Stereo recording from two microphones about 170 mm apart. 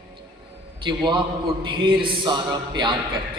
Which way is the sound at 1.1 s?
30° right (ahead or behind).